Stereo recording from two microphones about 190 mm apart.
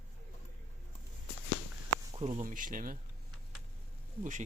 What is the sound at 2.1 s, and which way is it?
Speech, 35° right (ahead or behind).